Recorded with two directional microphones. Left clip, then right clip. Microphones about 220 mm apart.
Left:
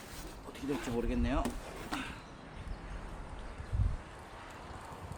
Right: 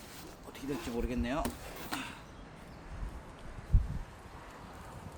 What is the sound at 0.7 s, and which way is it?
Speech, 15° right (ahead or behind).